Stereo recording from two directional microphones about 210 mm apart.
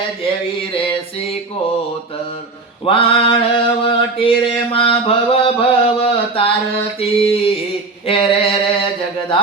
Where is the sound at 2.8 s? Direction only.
25° left (ahead or behind).